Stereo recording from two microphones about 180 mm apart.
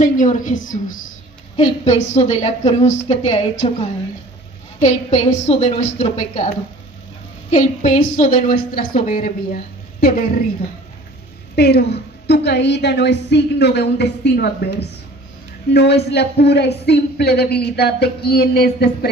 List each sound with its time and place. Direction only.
0.0 s a woman's voice: 45° left (ahead or behind)
7.5 s a woman's voice: 40° left (ahead or behind)
11.5 s a woman's voice: 65° left (ahead or behind)